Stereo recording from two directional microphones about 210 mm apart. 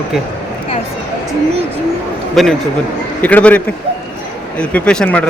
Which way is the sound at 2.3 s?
Centre (ahead or behind).